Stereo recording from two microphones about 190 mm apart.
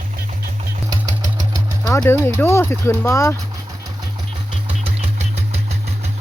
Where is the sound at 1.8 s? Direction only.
15° left (ahead or behind).